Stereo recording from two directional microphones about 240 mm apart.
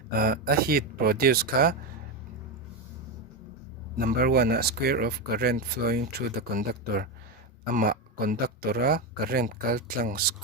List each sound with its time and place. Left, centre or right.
0.1 s speech: right
3.9 s speech: right